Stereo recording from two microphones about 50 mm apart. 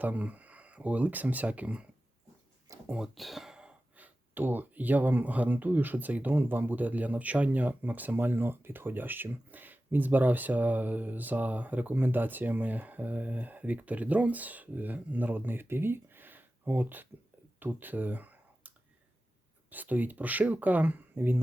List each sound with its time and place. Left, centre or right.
0.0 s speech: right
3.0 s speech: centre
3.9 s speech: right
17.6 s computer keyboard: right
19.7 s speech: right